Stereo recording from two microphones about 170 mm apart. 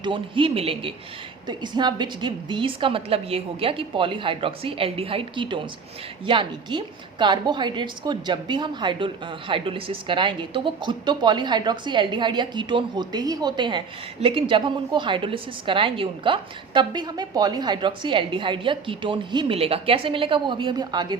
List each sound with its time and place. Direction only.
0.0 s a woman's voice: 30° right (ahead or behind)